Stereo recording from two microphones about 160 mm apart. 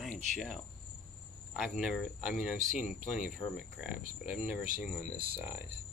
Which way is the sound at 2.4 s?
5° right (ahead or behind).